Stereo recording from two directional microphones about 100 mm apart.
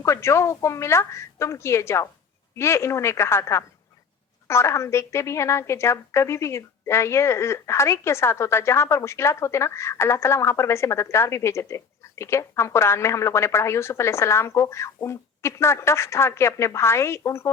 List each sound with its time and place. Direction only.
0.0 s a woman's voice: 25° left (ahead or behind)